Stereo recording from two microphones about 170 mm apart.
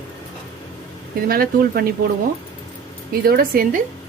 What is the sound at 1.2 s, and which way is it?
Speech, 60° right (ahead or behind).